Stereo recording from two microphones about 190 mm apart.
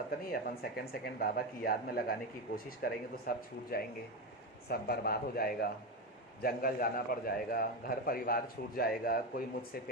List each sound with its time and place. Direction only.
0.3 s a man's voice: 55° left (ahead or behind)